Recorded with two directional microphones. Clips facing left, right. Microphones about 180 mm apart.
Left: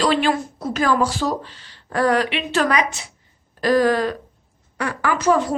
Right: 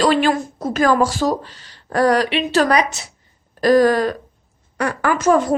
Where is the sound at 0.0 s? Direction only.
45° right (ahead or behind).